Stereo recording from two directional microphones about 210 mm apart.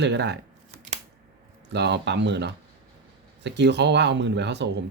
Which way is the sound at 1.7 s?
55° right (ahead or behind).